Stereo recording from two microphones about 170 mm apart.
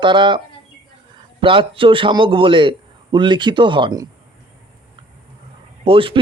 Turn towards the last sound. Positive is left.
turn(degrees=-30)  # may be behind; listen again after turning